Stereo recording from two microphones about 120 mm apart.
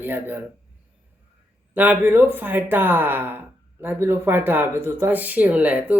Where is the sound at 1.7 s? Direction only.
15° right (ahead or behind).